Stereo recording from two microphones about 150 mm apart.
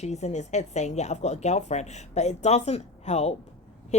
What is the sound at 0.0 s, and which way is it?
A woman's voice, 50° left (ahead or behind).